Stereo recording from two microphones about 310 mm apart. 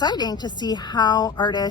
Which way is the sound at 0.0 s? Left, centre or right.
Centre.